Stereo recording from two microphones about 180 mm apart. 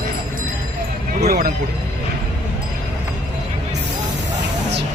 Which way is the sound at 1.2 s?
60° right (ahead or behind).